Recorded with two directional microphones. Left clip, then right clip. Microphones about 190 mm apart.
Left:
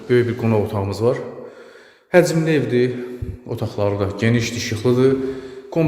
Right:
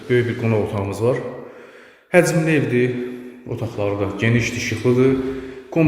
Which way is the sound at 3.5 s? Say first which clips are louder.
Left 2 dB; 30° left (ahead or behind).